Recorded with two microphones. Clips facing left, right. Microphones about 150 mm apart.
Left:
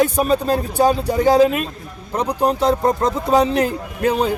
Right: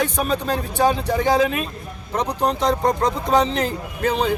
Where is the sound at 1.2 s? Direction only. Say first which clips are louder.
Left 6 dB; 35° left (ahead or behind).